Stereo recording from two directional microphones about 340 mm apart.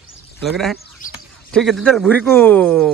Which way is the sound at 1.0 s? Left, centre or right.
Left.